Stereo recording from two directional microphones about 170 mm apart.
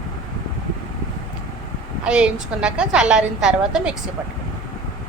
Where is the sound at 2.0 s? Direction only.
5° right (ahead or behind).